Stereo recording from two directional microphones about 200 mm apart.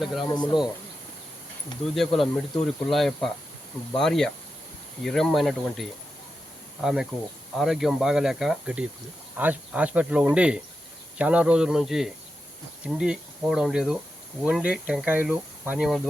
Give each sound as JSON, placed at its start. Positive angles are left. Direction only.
{"t": 0.0, "sound": "speech", "side_deg": 0}
{"t": 0.5, "sound": "speech", "side_deg": 25}
{"t": 2.0, "sound": "speech", "side_deg": 0}